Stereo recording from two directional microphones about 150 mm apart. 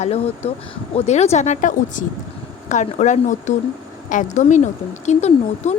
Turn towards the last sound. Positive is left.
turn(degrees=50)  # may be behind; listen again after turning